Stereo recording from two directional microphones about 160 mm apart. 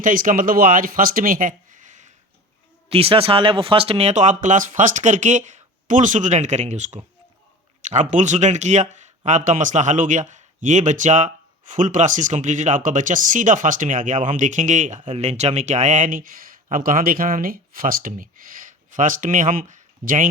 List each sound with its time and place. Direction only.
0.0 s speech: 60° right (ahead or behind)
2.9 s speech: 35° right (ahead or behind); by 20.2 s 55° right (ahead or behind)